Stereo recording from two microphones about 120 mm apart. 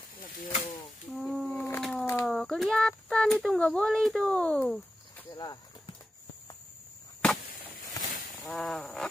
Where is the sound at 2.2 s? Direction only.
Centre (ahead or behind).